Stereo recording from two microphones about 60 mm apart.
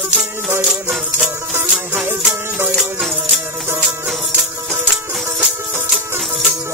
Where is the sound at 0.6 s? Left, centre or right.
Centre.